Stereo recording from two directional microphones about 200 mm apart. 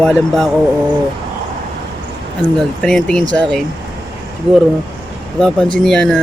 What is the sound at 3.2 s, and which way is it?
Speech, 20° right (ahead or behind).